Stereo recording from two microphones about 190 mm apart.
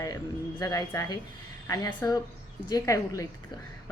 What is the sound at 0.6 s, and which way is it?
A woman's voice, 20° left (ahead or behind).